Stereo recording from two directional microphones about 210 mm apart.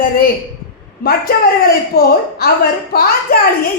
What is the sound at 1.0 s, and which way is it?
A woman's voice, 45° left (ahead or behind).